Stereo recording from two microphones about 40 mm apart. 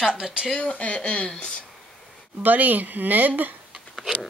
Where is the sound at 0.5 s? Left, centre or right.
Left.